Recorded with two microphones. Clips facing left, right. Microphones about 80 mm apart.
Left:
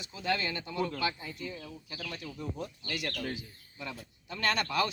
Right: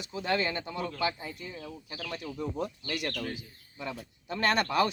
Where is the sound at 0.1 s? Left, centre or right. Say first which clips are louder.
Right 3 dB; right.